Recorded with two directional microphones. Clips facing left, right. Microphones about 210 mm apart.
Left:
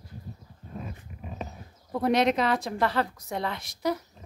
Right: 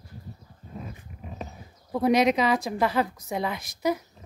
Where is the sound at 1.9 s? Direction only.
5° right (ahead or behind).